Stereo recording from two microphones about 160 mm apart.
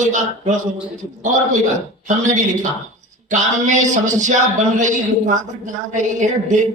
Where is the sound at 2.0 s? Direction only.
50° right (ahead or behind).